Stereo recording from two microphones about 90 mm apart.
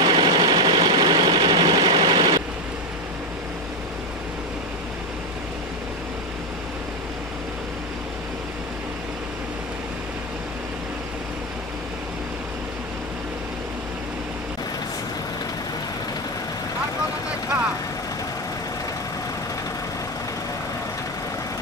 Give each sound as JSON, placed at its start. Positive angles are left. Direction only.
{"t": 0.0, "sound": "engine", "side_deg": -60}